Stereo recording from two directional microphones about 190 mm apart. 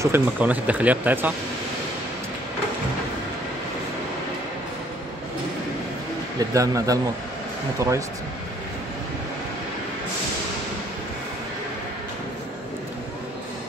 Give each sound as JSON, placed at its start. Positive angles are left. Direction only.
{"t": 0.0, "sound": "speech", "side_deg": -10}
{"t": 6.5, "sound": "speech", "side_deg": -15}